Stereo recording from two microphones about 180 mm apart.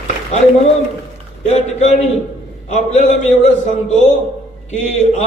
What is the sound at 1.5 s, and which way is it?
A man's voice, 40° left (ahead or behind).